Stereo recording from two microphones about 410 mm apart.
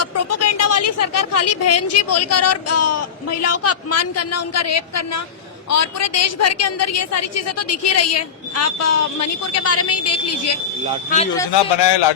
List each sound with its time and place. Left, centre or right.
0.0 s speech: left
11.1 s speech: centre
11.5 s speech: left